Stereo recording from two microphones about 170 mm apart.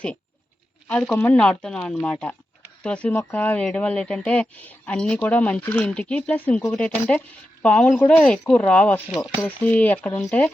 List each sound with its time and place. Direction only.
0.9 s speech: 5° left (ahead or behind)